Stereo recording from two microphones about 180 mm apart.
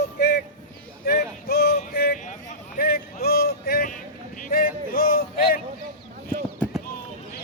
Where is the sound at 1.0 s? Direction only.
60° left (ahead or behind).